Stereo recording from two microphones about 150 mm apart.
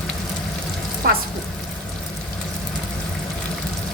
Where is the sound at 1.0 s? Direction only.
80° right.